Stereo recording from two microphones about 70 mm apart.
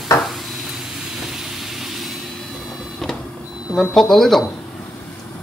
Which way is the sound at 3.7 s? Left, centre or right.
Centre.